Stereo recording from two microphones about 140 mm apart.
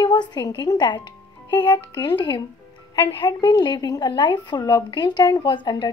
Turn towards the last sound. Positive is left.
turn(degrees=35)  # may be behind; listen again after turning